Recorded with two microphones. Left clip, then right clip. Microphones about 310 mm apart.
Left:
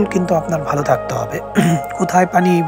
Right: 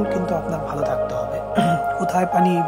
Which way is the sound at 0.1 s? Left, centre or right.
Centre.